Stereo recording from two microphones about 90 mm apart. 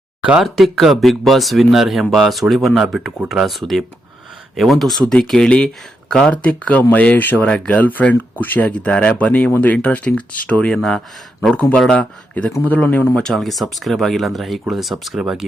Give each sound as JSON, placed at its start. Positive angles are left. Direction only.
{"t": 0.2, "sound": "speech", "side_deg": -10}
{"t": 10.8, "sound": "speech", "side_deg": 5}
{"t": 13.1, "sound": "speech", "side_deg": 5}